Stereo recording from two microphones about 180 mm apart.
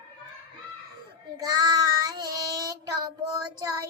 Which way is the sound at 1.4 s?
20° right (ahead or behind).